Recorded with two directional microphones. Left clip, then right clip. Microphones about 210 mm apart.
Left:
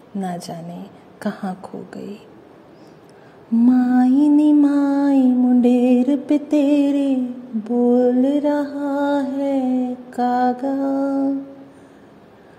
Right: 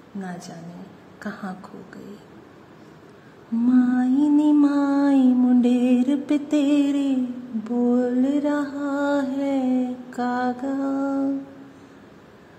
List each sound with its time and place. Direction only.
0.2 s music: 25° left (ahead or behind)
3.6 s music: 25° left (ahead or behind)
4.6 s a sound: 15° left (ahead or behind)
7.6 s mantra: 10° left (ahead or behind)